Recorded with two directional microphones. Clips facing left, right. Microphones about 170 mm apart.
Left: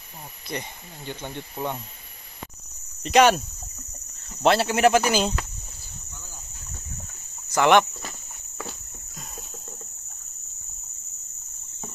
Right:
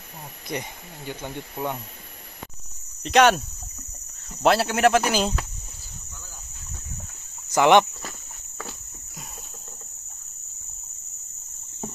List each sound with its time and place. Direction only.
0.5 s speech: 10° right (ahead or behind)
3.0 s speech: centre (ahead or behind)
7.4 s speech: 15° right (ahead or behind)